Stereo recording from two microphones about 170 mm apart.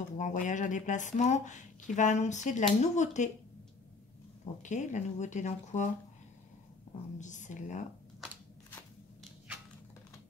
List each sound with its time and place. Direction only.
0.2 s speech: 45° left (ahead or behind)
4.6 s speech: 45° left (ahead or behind)
7.2 s speech: 45° left (ahead or behind)
8.6 s a sound: 10° left (ahead or behind)